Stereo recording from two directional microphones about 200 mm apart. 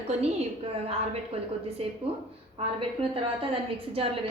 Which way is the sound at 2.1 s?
30° right (ahead or behind).